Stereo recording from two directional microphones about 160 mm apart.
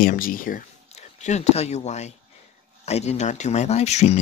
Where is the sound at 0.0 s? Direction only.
60° left (ahead or behind).